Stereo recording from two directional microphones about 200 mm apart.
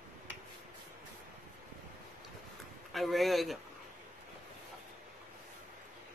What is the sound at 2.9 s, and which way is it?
Speech, centre (ahead or behind).